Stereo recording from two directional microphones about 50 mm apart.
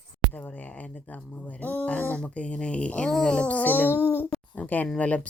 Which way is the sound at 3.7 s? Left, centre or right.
Left.